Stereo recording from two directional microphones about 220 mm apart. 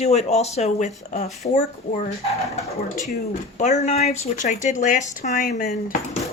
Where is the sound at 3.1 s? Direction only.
30° left (ahead or behind).